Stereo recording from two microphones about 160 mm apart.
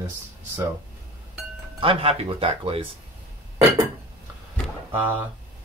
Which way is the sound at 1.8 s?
35° right (ahead or behind).